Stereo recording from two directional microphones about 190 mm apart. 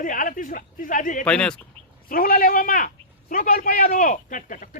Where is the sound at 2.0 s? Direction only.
50° left (ahead or behind).